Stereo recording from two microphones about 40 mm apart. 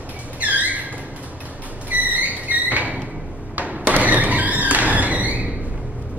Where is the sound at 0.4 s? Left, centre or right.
Right.